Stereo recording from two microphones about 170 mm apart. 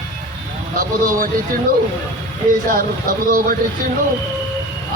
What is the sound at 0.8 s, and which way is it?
Speech, 55° right (ahead or behind).